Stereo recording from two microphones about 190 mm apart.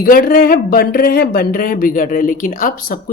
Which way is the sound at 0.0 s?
50° left (ahead or behind).